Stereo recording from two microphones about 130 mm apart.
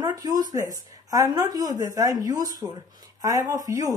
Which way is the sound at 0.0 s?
30° right (ahead or behind).